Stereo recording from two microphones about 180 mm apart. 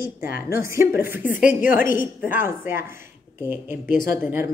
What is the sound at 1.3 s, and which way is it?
Speech, 50° left (ahead or behind).